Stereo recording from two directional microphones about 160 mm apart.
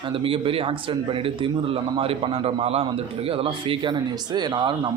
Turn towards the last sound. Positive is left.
turn(degrees=-30)  # may be behind; listen again after turning